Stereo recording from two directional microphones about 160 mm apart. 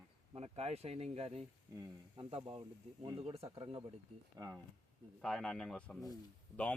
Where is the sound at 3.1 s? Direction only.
40° right (ahead or behind).